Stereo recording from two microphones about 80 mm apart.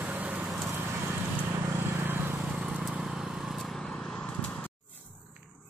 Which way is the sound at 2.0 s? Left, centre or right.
Right.